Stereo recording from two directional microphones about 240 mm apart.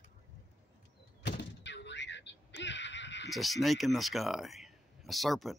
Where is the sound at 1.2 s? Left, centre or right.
Left.